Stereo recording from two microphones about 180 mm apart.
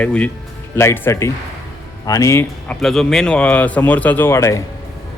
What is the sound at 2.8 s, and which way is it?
Speech, centre (ahead or behind).